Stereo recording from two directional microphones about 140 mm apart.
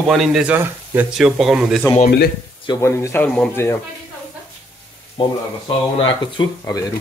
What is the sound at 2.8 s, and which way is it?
Speech, 20° left (ahead or behind).